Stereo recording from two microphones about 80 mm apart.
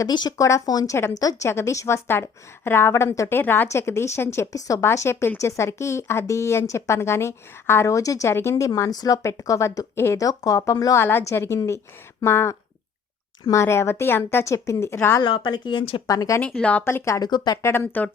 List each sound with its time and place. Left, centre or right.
0.1 s speech: left
0.3 s a woman's voice: left
1.5 s a woman's voice: left
2.0 s a woman's voice: left
4.5 s a woman's voice: left
8.3 s a woman's voice: left
10.2 s a woman's voice: left
10.9 s a woman's voice: left
15.2 s speech: left
16.4 s speech: centre
16.8 s a woman's voice: left
17.2 s speech: left
17.6 s a woman's voice: left